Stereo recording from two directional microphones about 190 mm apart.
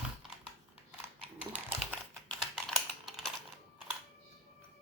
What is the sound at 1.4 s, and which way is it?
Typing, 5° right (ahead or behind).